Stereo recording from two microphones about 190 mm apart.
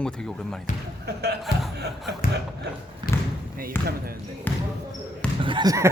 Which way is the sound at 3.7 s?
10° left (ahead or behind).